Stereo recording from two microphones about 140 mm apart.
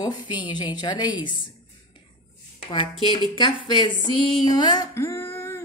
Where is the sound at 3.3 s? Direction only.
35° left (ahead or behind).